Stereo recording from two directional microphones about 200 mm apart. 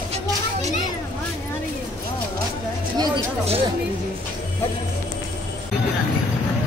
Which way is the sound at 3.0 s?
30° right (ahead or behind).